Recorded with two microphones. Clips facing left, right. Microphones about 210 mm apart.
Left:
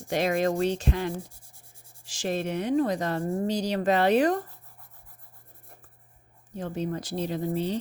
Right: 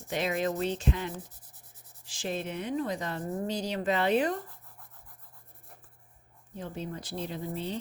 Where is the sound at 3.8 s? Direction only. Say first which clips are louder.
Left 5 dB; 40° left (ahead or behind).